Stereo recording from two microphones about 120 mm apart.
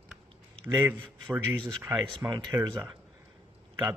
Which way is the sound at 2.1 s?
40° right (ahead or behind).